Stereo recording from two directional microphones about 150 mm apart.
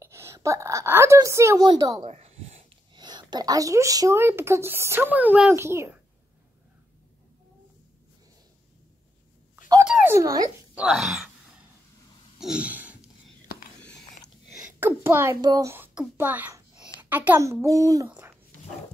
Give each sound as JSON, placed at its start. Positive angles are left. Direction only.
{"t": 0.0, "sound": "a woman's voice", "side_deg": -20}
{"t": 2.0, "sound": "a sound", "side_deg": -45}
{"t": 2.9, "sound": "speech", "side_deg": -30}
{"t": 9.8, "sound": "a sound", "side_deg": -5}
{"t": 10.1, "sound": "speech", "side_deg": -20}
{"t": 10.7, "sound": "speech", "side_deg": -5}
{"t": 12.4, "sound": "a sound", "side_deg": -5}
{"t": 13.7, "sound": "biting", "side_deg": 5}
{"t": 14.8, "sound": "speech", "side_deg": -15}